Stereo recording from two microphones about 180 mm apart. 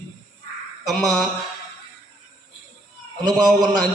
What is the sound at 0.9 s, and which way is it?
Speech, centre (ahead or behind).